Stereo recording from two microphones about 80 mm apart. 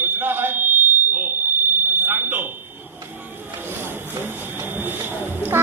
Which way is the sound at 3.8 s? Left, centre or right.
Right.